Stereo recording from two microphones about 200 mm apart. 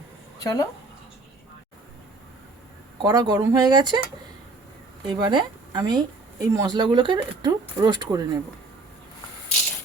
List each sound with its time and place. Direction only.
0.4 s a woman's voice: 15° left (ahead or behind)
3.0 s speech: 20° right (ahead or behind)
5.0 s speech: 20° right (ahead or behind)